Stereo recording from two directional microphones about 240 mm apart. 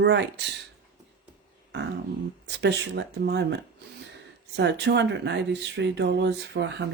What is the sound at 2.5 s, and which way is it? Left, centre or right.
Speech, right.